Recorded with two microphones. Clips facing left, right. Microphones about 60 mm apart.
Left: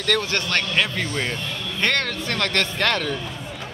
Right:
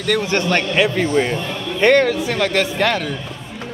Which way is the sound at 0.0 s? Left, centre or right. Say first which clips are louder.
Right 5 dB; centre.